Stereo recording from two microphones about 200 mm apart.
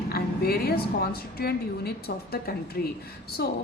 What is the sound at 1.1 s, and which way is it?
A woman's voice, 50° left (ahead or behind).